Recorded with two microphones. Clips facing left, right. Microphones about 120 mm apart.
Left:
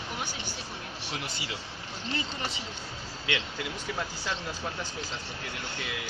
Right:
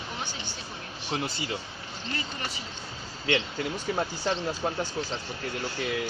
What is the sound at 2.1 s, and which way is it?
Speech, 20° left (ahead or behind).